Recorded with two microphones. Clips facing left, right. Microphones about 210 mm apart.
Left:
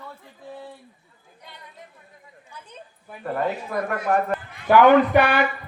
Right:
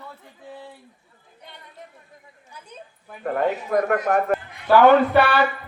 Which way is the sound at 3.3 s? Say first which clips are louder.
Right 4 dB; 45° right (ahead or behind).